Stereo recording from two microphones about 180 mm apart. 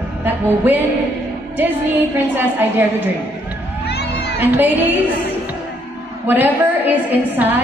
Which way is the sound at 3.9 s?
60° left (ahead or behind).